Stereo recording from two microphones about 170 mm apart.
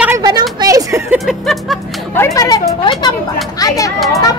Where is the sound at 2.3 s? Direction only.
20° left (ahead or behind).